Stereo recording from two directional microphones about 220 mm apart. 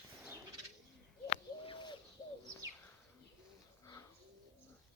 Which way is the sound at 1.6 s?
20° left (ahead or behind).